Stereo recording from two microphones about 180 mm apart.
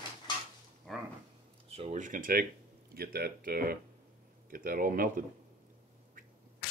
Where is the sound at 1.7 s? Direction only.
35° right (ahead or behind).